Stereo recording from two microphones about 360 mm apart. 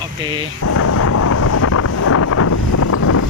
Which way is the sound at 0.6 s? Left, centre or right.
Left.